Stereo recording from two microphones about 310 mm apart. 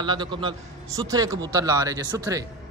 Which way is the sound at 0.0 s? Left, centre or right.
Centre.